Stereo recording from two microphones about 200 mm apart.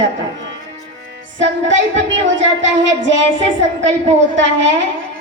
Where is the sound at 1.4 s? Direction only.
65° right (ahead or behind).